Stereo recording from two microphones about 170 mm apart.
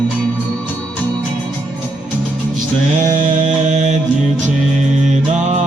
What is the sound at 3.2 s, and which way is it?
Mantra, 45° right (ahead or behind).